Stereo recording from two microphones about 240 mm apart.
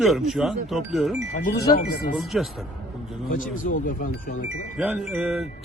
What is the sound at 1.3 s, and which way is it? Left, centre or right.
Speech, left.